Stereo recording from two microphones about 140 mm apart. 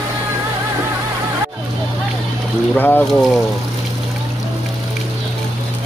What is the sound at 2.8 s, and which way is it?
Speech, 10° left (ahead or behind).